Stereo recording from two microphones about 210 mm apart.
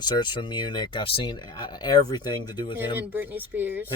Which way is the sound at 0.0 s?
20° left (ahead or behind).